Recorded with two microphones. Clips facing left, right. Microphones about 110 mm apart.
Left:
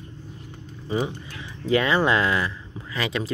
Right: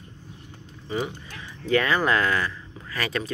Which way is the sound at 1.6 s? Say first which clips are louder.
Left 2 dB; 25° left (ahead or behind).